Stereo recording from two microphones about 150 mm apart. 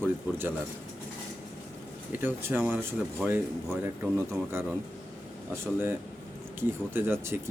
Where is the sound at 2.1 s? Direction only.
15° right (ahead or behind).